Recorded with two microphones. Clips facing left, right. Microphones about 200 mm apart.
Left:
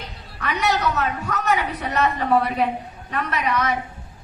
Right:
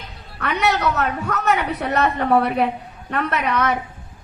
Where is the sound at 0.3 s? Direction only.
60° right (ahead or behind).